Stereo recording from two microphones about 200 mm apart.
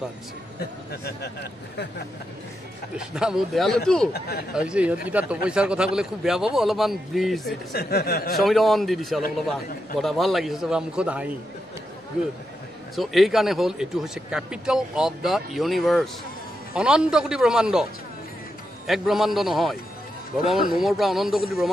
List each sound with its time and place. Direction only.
0.6 s speech: 50° left (ahead or behind)
3.0 s speech: 5° right (ahead or behind)
4.1 s speech: 50° left (ahead or behind)
4.6 s speech: 5° right (ahead or behind)
7.7 s speech: 50° left (ahead or behind)
8.4 s speech: centre (ahead or behind)
12.9 s speech: centre (ahead or behind)
18.9 s speech: centre (ahead or behind)